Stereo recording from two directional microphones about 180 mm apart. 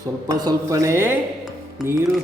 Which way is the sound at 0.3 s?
20° right (ahead or behind).